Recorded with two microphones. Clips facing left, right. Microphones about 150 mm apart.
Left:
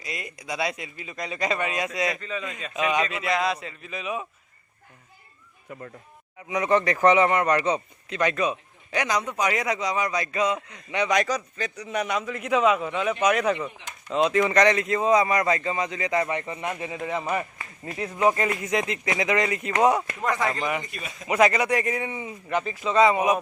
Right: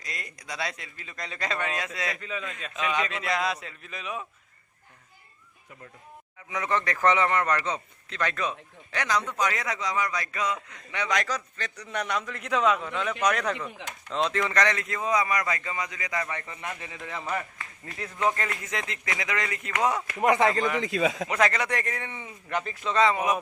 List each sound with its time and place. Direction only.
0.0 s speech: 5° left (ahead or behind)
2.8 s a man's voice: 10° left (ahead or behind)
6.5 s a man's voice: 20° left (ahead or behind)
11.6 s a man's voice: 5° left (ahead or behind)
14.4 s a man's voice: 20° left (ahead or behind)
20.2 s speech: 20° right (ahead or behind)
20.8 s a man's voice: 90° right
21.2 s a man's voice: 10° left (ahead or behind)
23.0 s a man's voice: 20° left (ahead or behind)